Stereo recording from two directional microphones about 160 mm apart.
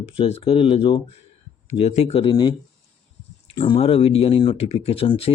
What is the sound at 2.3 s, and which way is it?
Speech, 30° left (ahead or behind).